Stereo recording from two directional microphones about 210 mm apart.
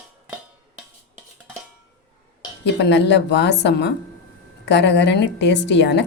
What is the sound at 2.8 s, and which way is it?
A woman's voice, 55° left (ahead or behind).